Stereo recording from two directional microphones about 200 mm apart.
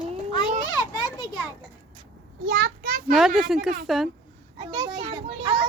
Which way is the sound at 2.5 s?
50° right (ahead or behind).